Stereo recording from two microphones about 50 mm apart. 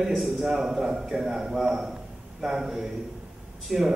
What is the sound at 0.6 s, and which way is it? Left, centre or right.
A man's voice, centre.